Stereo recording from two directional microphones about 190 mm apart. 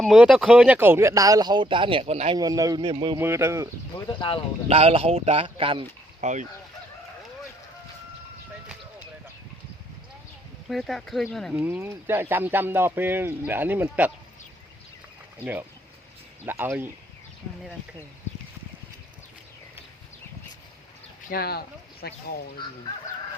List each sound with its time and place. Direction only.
0.0 s speech: centre (ahead or behind); by 2.4 s 30° right (ahead or behind)
2.4 s a man's voice: 20° right (ahead or behind)
3.2 s speech: 15° right (ahead or behind)
3.9 s speech: 20° left (ahead or behind)
4.7 s speech: 30° right (ahead or behind)
6.2 s speech: 40° right (ahead or behind)
10.7 s speech: centre (ahead or behind)
11.6 s speech: 10° right (ahead or behind)
16.5 s speech: 10° right (ahead or behind)
21.2 s speech: 55° left (ahead or behind)